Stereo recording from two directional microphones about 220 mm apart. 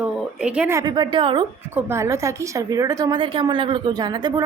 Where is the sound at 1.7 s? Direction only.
10° right (ahead or behind).